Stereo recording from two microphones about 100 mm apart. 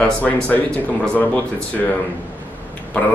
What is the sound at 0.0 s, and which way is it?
A man's voice, 15° left (ahead or behind).